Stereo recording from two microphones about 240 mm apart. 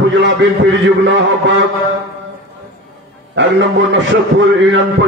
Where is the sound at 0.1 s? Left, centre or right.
Right.